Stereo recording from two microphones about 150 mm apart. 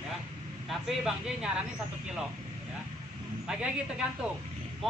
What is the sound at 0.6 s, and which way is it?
Speech, centre (ahead or behind).